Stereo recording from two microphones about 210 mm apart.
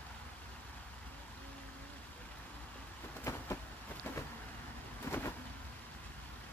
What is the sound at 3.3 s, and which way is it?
Vehicle, 15° left (ahead or behind).